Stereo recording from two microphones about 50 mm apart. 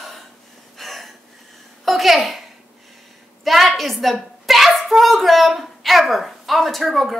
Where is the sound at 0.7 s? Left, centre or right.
Centre.